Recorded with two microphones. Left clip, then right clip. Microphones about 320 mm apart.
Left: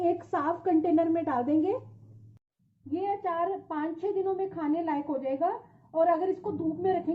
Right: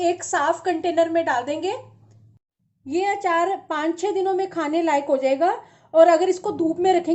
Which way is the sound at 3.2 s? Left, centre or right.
Right.